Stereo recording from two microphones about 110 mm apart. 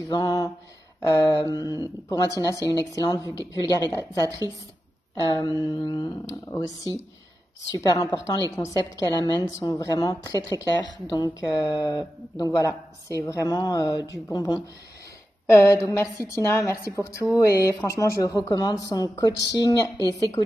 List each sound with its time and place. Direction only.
0.1 s a woman's voice: 35° left (ahead or behind)
5.3 s a woman's voice: 40° left (ahead or behind)
7.7 s a woman's voice: 35° left (ahead or behind)
15.5 s a woman's voice: 25° left (ahead or behind)